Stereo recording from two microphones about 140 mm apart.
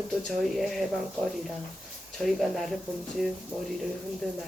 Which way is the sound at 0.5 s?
Centre (ahead or behind).